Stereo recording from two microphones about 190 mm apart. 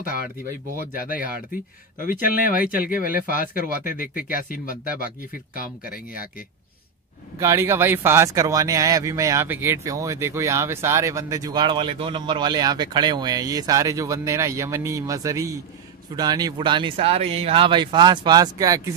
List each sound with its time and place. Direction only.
0.9 s speech: 45° left (ahead or behind)
7.3 s speech: 15° right (ahead or behind)